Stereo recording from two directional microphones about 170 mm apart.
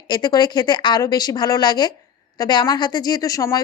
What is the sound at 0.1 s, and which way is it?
A woman's voice, 25° left (ahead or behind).